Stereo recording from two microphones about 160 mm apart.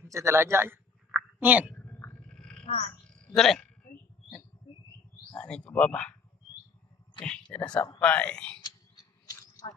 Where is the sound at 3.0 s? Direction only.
5° left (ahead or behind).